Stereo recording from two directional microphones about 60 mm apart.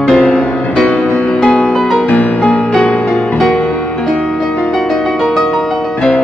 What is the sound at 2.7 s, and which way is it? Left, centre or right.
Music, centre.